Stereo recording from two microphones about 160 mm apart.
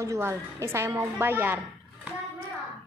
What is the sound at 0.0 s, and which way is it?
A woman's voice, 15° right (ahead or behind).